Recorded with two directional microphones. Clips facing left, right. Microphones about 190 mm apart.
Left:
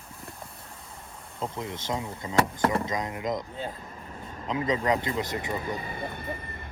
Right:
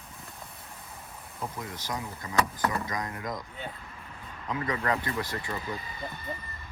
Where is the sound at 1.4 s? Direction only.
25° left (ahead or behind).